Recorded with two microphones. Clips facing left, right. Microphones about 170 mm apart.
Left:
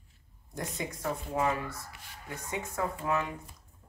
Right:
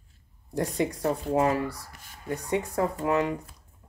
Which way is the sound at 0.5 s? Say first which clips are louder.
Right 10 dB; 35° right (ahead or behind).